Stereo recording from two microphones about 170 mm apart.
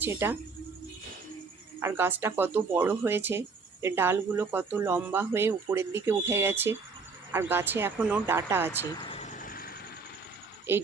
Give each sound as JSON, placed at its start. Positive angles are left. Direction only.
{"t": 0.0, "sound": "speech", "side_deg": -15}
{"t": 1.8, "sound": "speech", "side_deg": -15}
{"t": 9.0, "sound": "vehicle", "side_deg": 40}
{"t": 9.4, "sound": "vehicle", "side_deg": 55}
{"t": 10.7, "sound": "speech", "side_deg": -15}